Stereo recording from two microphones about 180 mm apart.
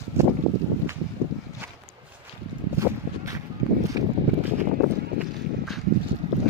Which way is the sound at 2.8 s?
15° right (ahead or behind).